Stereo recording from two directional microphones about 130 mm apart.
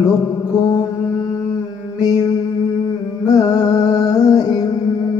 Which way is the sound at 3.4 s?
30° left (ahead or behind).